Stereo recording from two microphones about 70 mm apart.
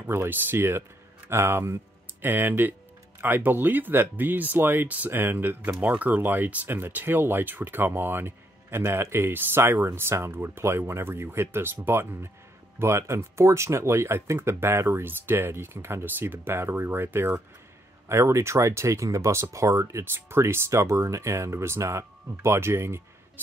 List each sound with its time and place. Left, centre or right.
0.0 s speech: right
5.7 s speech: centre; by 23.0 s right